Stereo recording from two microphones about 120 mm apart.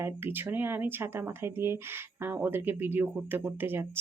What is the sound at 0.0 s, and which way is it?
Speech, 20° right (ahead or behind).